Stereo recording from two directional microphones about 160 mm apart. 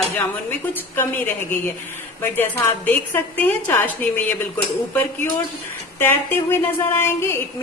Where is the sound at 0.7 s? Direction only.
10° left (ahead or behind).